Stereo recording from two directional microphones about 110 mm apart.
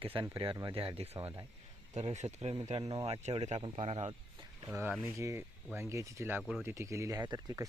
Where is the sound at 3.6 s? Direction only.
60° right (ahead or behind).